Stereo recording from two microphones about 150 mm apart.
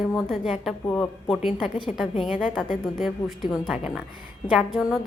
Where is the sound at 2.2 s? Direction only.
10° right (ahead or behind).